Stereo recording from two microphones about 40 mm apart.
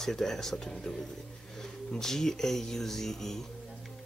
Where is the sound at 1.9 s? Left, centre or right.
Centre.